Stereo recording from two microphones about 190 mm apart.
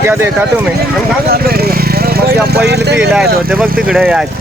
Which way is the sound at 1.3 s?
55° right (ahead or behind).